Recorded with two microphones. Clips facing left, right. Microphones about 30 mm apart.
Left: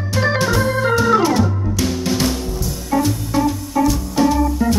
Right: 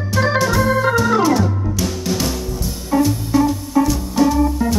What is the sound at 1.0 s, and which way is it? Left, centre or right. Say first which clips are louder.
Music: left 1 dB; centre.